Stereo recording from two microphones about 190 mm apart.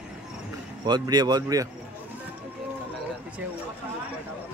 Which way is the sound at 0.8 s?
20° right (ahead or behind).